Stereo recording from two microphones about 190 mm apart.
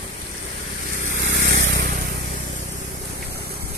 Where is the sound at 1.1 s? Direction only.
70° right (ahead or behind); by 2.1 s 50° right (ahead or behind).